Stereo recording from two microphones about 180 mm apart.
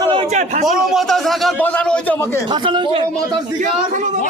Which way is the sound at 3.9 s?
45° right (ahead or behind).